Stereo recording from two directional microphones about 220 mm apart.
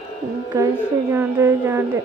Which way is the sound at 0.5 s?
15° right (ahead or behind).